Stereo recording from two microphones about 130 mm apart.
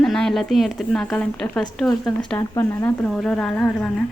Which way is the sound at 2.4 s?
20° left (ahead or behind).